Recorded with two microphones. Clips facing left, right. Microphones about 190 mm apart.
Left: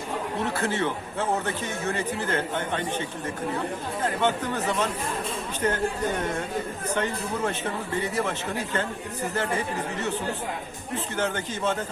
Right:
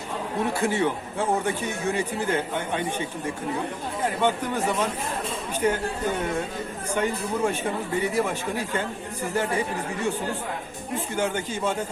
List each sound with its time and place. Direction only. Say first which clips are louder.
0.4 s speech: right 4 dB; 10° right (ahead or behind)
6.9 s speech: right 3 dB; 10° right (ahead or behind)